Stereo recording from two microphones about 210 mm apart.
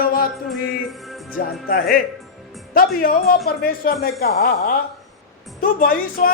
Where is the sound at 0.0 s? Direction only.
45° left (ahead or behind).